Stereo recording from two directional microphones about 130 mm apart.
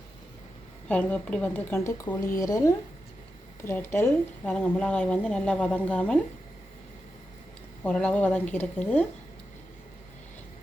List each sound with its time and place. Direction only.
0.9 s a woman's voice: 10° left (ahead or behind)
2.1 s speech: 35° left (ahead or behind)
2.4 s a woman's voice: 25° left (ahead or behind)
7.9 s a woman's voice: 10° left (ahead or behind)